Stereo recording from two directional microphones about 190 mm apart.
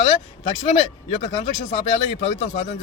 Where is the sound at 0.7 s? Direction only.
35° left (ahead or behind).